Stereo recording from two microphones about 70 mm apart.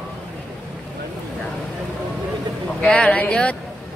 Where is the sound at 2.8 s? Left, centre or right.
Centre.